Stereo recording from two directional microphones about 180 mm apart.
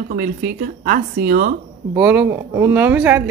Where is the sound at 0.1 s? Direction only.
55° right (ahead or behind).